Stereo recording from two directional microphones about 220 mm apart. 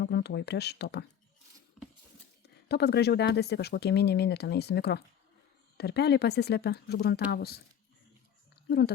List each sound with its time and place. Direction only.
0.0 s speech: 50° left (ahead or behind)
1.8 s a sound: centre (ahead or behind)
2.6 s speech: 50° left (ahead or behind)